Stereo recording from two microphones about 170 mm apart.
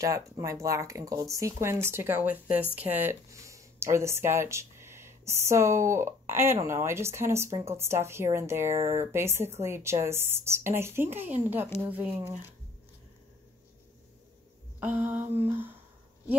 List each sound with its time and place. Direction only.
0.0 s speech: 20° right (ahead or behind)
14.8 s speech: 10° right (ahead or behind)